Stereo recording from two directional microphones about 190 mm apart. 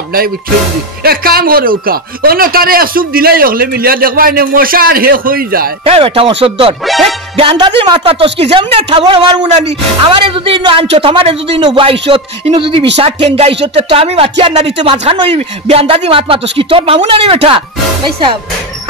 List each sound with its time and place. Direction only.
1.0 s speech: 50° right (ahead or behind)
5.9 s speech: 30° right (ahead or behind)
6.8 s music: centre (ahead or behind)
7.3 s speech: 25° right (ahead or behind)